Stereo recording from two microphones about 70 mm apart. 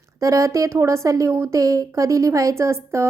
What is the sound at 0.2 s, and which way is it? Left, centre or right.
A woman's voice, right.